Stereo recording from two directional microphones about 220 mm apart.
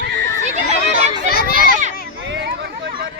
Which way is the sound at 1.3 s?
45° left (ahead or behind).